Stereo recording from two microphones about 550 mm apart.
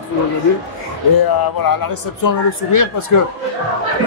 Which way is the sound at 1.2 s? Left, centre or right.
Left.